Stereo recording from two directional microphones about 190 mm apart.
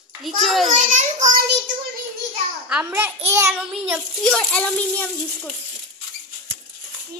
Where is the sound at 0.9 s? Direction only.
40° right (ahead or behind).